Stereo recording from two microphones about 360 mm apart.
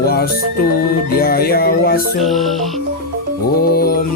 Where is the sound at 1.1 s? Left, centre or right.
Left.